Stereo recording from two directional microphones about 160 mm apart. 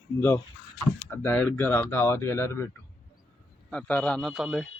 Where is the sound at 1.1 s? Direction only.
10° left (ahead or behind).